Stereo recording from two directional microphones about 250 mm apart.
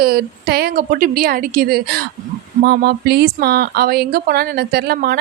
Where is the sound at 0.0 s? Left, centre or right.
Right.